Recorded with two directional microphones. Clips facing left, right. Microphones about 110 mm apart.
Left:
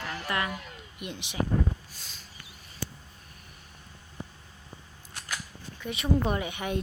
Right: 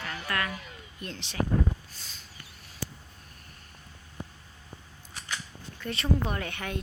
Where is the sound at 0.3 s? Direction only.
15° left (ahead or behind).